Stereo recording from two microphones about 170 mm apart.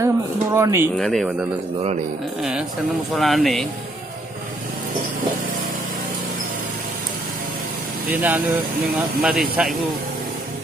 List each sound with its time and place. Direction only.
0.0 s speech: 15° right (ahead or behind)
0.9 s speech: centre (ahead or behind)
3.2 s speech: centre (ahead or behind)
8.1 s speech: 10° right (ahead or behind)